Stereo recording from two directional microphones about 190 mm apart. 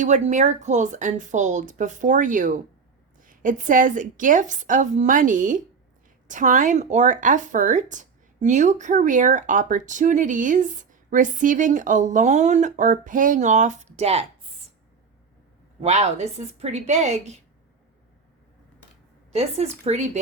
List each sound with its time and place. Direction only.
0.0 s a woman's voice: 40° right (ahead or behind)
15.8 s speech: 35° right (ahead or behind)
19.3 s a woman's voice: 35° right (ahead or behind)